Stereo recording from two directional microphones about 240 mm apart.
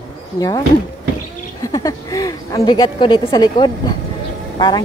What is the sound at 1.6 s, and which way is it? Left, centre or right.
Speech, centre.